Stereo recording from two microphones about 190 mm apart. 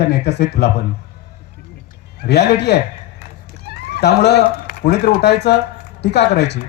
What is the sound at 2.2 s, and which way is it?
Speech, 60° left (ahead or behind).